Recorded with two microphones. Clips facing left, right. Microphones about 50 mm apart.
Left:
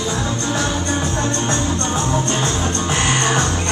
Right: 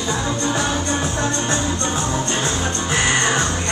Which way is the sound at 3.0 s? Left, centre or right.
Right.